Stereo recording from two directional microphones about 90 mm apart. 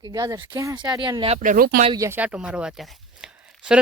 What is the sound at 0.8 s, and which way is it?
Speech, 50° right (ahead or behind).